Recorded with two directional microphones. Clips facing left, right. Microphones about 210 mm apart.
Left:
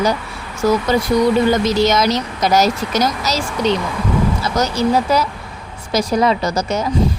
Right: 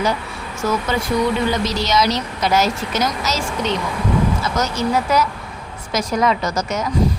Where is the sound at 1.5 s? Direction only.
50° left (ahead or behind).